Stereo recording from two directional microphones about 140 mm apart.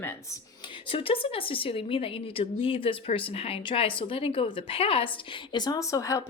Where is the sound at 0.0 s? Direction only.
15° left (ahead or behind).